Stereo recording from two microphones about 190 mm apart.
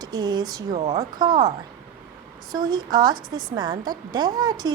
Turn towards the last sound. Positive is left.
turn(degrees=-20)  # may be behind; listen again after turning